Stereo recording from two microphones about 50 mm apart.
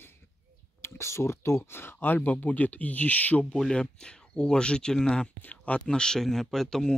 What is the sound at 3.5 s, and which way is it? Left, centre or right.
Speech, centre.